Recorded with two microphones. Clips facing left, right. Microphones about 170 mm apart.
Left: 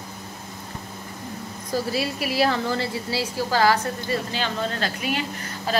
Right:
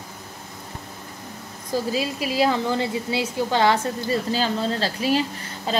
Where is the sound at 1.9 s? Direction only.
20° right (ahead or behind).